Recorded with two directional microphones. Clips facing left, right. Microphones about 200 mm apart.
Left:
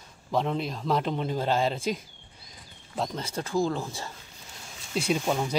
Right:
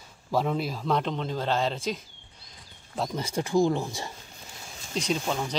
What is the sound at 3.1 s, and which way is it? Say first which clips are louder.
Speech: right 5 dB; 15° right (ahead or behind).